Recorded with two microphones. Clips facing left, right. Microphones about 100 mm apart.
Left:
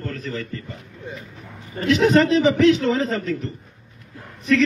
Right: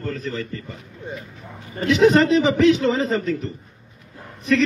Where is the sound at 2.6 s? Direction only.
20° right (ahead or behind).